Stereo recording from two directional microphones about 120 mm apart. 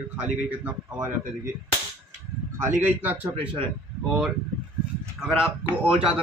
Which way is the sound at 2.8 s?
15° right (ahead or behind).